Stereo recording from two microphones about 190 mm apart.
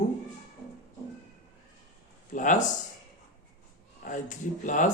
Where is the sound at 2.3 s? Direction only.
40° left (ahead or behind).